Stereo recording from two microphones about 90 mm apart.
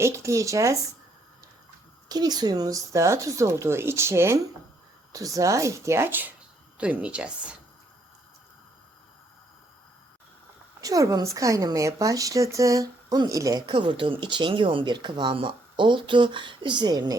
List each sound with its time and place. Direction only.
0.0 s speech: 35° right (ahead or behind)
2.0 s a woman's voice: 50° right (ahead or behind); by 7.5 s 10° right (ahead or behind)
10.8 s speech: 40° right (ahead or behind)